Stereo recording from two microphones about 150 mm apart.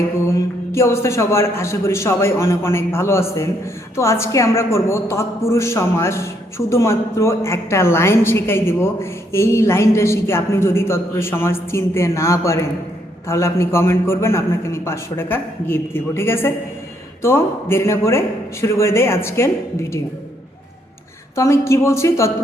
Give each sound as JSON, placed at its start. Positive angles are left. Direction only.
{"t": 0.3, "sound": "a woman's voice", "side_deg": 20}
{"t": 21.3, "sound": "a woman's voice", "side_deg": 20}